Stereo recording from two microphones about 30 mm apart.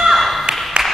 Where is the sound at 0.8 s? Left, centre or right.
Right.